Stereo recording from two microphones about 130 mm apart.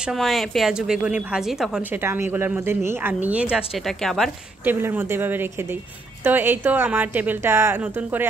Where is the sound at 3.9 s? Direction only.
Centre (ahead or behind).